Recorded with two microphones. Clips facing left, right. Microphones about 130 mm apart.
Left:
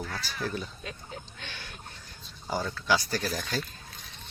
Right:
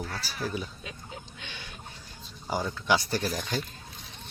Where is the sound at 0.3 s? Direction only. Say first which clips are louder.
Right 1 dB; 5° right (ahead or behind).